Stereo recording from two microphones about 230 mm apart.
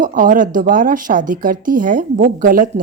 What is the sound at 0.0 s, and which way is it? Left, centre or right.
Speech, right.